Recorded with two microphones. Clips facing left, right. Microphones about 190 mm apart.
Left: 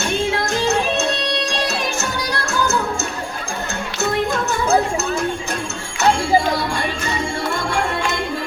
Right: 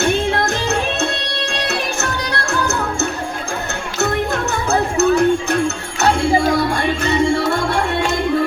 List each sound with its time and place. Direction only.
1.6 s music: 60° right (ahead or behind)
4.9 s music: 65° right (ahead or behind)